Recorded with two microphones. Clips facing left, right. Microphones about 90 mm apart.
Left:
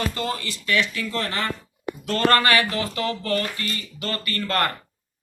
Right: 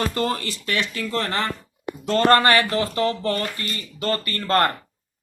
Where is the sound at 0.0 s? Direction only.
35° right (ahead or behind).